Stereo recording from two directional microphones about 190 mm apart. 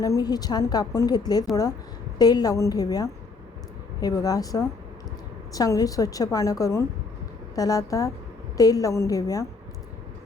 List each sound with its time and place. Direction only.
0.0 s a woman's voice: 20° left (ahead or behind)